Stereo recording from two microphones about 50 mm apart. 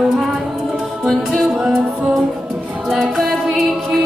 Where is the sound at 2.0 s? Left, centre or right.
Centre.